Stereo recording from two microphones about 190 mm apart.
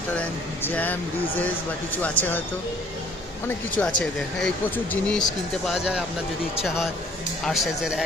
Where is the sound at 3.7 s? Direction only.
5° left (ahead or behind).